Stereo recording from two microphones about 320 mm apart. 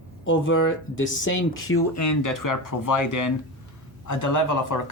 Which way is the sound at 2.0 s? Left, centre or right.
Left.